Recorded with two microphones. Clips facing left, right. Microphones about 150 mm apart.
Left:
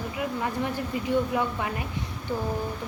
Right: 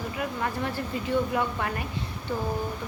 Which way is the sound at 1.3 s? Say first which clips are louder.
Even; 10° left (ahead or behind).